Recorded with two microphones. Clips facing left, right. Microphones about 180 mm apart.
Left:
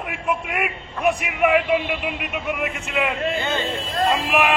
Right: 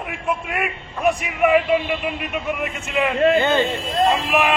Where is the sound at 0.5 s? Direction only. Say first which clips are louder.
Right 1 dB; 5° left (ahead or behind).